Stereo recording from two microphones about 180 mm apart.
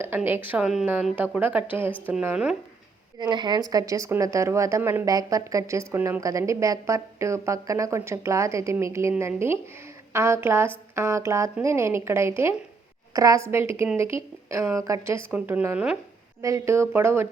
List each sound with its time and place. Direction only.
0.0 s a woman's voice: 10° right (ahead or behind)
3.2 s a woman's voice: 25° right (ahead or behind); by 16.0 s 5° right (ahead or behind)
16.4 s a woman's voice: 15° right (ahead or behind)